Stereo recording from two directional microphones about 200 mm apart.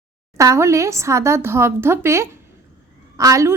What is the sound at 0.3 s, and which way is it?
A woman's voice, 15° right (ahead or behind).